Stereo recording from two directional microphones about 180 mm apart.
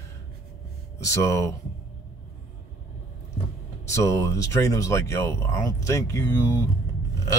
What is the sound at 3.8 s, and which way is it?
Speech, 15° left (ahead or behind).